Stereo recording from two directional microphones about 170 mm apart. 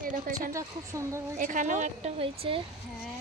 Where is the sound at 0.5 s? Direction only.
20° right (ahead or behind).